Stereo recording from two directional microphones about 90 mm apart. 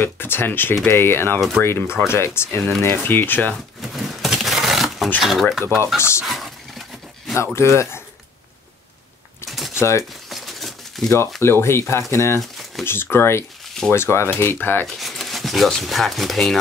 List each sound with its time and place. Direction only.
0.0 s speech: 25° left (ahead or behind)
3.5 s shuffling cards: centre (ahead or behind)
5.2 s speech: centre (ahead or behind)
5.9 s speech: 30° left (ahead or behind)
6.2 s a sound: centre (ahead or behind)
7.5 s speech: 30° left (ahead or behind)
9.8 s speech: 35° left (ahead or behind)
10.3 s a sound: centre (ahead or behind)
11.4 s speech: 30° left (ahead or behind)
12.4 s crumpling: centre (ahead or behind)
12.8 s speech: 25° left (ahead or behind)
15.0 s speech: centre (ahead or behind)